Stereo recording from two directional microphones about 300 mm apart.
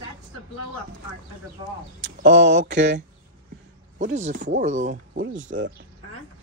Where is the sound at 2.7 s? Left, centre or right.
Right.